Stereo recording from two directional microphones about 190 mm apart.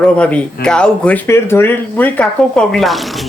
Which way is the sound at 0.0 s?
5° left (ahead or behind).